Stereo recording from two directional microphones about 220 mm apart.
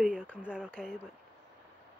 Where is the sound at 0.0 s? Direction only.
5° right (ahead or behind).